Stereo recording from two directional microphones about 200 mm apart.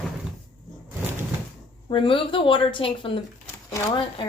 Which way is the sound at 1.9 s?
25° left (ahead or behind).